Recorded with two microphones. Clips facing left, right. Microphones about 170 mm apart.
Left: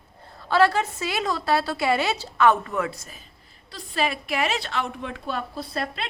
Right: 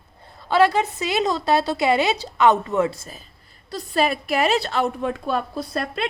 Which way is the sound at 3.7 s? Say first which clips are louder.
Right 5 dB; 40° right (ahead or behind).